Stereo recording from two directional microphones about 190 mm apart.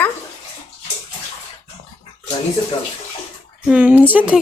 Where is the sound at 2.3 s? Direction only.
25° left (ahead or behind).